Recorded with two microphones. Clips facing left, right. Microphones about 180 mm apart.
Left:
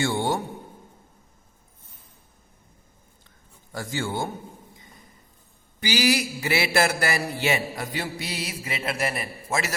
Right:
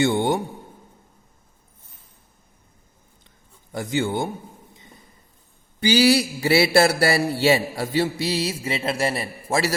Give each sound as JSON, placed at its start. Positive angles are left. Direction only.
{"t": 0.0, "sound": "a man's voice", "side_deg": -20}
{"t": 3.7, "sound": "a man's voice", "side_deg": -20}
{"t": 5.8, "sound": "mantra", "side_deg": -30}
{"t": 8.2, "sound": "a man's voice", "side_deg": -30}